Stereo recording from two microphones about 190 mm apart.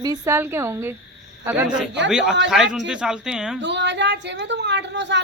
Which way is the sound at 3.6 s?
65° right (ahead or behind).